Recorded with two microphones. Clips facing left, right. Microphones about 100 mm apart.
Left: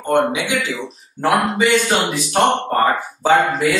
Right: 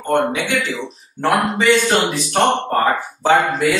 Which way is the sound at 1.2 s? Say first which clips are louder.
Even; 45° left (ahead or behind).